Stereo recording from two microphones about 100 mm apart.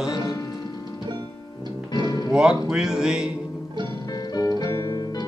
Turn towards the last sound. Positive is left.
turn(degrees=30)  # may be behind; listen again after turning